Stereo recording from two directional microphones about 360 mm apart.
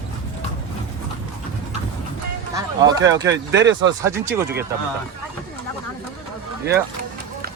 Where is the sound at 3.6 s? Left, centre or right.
Right.